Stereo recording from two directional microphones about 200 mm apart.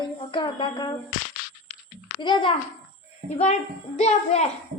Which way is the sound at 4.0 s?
35° left (ahead or behind).